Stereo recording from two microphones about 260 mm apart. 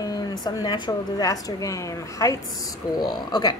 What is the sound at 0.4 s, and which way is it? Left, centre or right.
Speech, centre.